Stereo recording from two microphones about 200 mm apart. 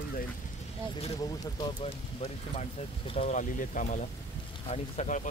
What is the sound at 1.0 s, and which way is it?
Speech, 25° left (ahead or behind).